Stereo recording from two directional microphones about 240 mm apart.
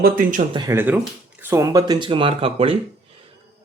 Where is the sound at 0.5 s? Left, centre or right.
Centre.